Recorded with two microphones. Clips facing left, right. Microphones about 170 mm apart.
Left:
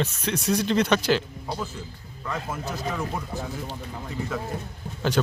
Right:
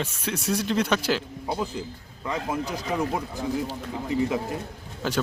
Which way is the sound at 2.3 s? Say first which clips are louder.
Right 3 dB; 15° right (ahead or behind).